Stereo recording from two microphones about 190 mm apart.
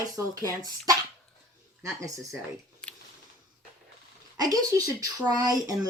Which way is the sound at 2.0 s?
15° right (ahead or behind).